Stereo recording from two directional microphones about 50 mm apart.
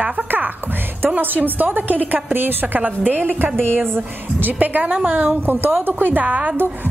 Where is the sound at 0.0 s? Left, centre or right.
Right.